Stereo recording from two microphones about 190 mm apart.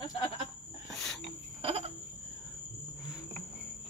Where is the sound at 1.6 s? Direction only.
30° right (ahead or behind).